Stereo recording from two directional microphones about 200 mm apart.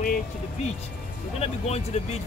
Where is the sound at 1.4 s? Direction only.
30° left (ahead or behind).